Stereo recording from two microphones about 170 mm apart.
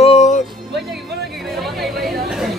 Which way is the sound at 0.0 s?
40° left (ahead or behind).